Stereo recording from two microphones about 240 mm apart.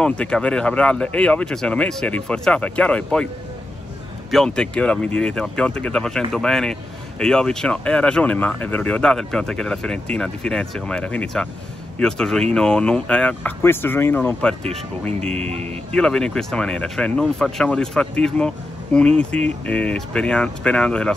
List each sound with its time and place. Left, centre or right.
0.0 s speech: centre
4.3 s speech: centre
15.3 s speech: right
15.9 s speech: centre